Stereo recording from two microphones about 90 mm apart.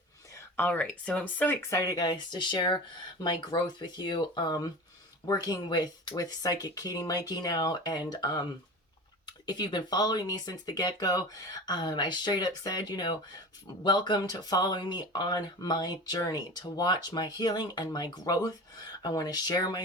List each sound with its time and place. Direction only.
0.3 s speech: 20° left (ahead or behind)
1.7 s speech: 45° left (ahead or behind)